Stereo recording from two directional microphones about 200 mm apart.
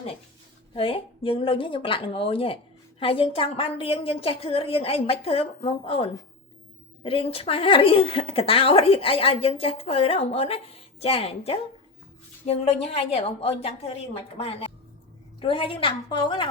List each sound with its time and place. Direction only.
0.7 s a woman's voice: 25° left (ahead or behind)